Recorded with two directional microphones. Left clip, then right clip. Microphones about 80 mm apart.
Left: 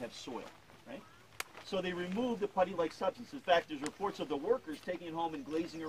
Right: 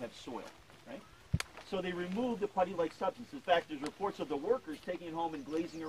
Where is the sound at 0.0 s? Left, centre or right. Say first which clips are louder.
Even; left.